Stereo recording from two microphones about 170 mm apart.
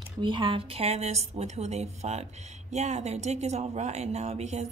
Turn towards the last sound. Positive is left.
turn(degrees=-40)  # may be behind; listen again after turning